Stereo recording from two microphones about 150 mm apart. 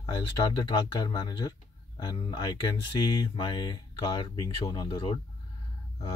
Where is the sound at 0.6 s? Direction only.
30° left (ahead or behind).